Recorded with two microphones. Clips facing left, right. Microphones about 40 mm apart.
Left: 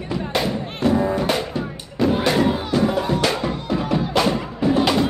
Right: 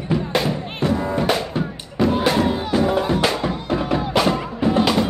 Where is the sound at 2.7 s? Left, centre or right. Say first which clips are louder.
Right 1 dB; centre.